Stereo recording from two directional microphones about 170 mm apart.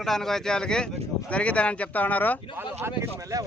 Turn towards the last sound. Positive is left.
turn(degrees=-15)  # may be behind; listen again after turning